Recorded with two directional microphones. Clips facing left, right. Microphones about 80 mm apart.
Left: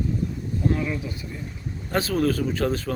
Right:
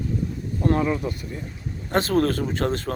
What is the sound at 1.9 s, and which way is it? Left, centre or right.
Speech, right.